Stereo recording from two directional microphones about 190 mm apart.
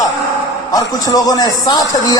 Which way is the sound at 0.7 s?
20° left (ahead or behind).